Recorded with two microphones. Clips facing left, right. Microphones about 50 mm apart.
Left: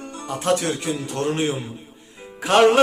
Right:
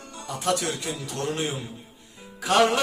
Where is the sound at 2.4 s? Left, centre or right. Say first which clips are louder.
Left 5 dB; left.